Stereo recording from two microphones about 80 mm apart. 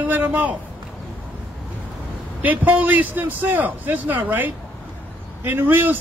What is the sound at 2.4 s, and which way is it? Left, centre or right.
A man's voice, centre.